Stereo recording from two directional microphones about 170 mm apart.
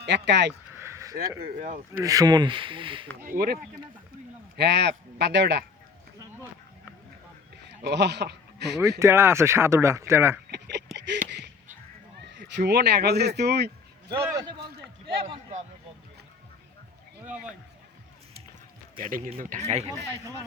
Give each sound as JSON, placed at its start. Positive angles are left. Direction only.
{"t": 0.0, "sound": "speech", "side_deg": -90}
{"t": 0.8, "sound": "a sound", "side_deg": -15}
{"t": 1.5, "sound": "speech", "side_deg": -50}
{"t": 2.0, "sound": "speech", "side_deg": -20}
{"t": 3.2, "sound": "a man's voice", "side_deg": -60}
{"t": 4.5, "sound": "speech", "side_deg": -75}
{"t": 7.8, "sound": "speech", "side_deg": -75}
{"t": 9.0, "sound": "speech", "side_deg": -15}
{"t": 10.5, "sound": "a sound", "side_deg": -80}
{"t": 12.3, "sound": "speech", "side_deg": -85}
{"t": 14.2, "sound": "speech", "side_deg": -20}
{"t": 15.0, "sound": "speech", "side_deg": -30}
{"t": 17.2, "sound": "speech", "side_deg": -5}
{"t": 18.9, "sound": "a man's voice", "side_deg": -55}